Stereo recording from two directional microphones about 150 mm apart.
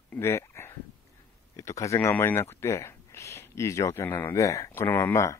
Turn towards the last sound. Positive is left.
turn(degrees=15)  # may be behind; listen again after turning